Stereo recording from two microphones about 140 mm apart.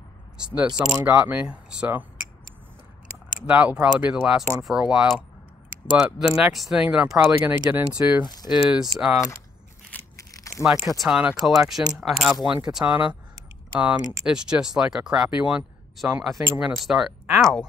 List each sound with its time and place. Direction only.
1.0 s speech: 10° right (ahead or behind)
3.4 s speech: 10° right (ahead or behind)
9.9 s crushing: 10° left (ahead or behind)
10.3 s a sound: 25° left (ahead or behind)
10.6 s speech: 5° right (ahead or behind)